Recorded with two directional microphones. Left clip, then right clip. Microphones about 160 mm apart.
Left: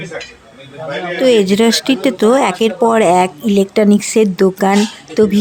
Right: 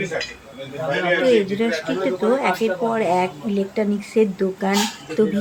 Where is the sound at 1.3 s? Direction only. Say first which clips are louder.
Left 7 dB; 90° left.